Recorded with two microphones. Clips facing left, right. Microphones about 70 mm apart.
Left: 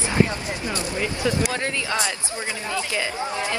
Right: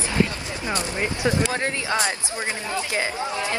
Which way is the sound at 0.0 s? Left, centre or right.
Left.